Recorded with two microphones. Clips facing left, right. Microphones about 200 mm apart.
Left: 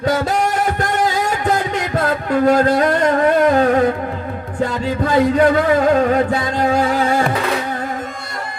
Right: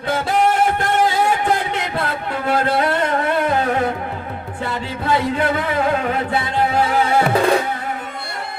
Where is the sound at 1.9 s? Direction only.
45° left (ahead or behind).